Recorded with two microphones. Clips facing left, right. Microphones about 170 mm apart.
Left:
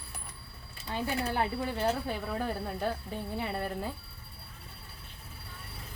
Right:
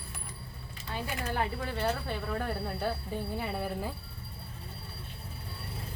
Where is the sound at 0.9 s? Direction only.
15° left (ahead or behind); by 3.9 s 5° right (ahead or behind).